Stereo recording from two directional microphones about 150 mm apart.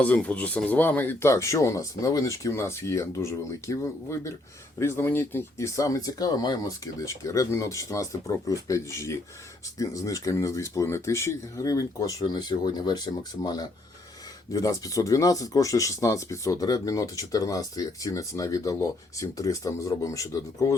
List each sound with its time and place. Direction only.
0.0 s speech: 10° left (ahead or behind)